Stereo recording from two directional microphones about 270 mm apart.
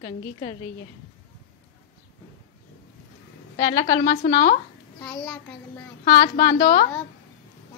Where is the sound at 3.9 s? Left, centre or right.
Left.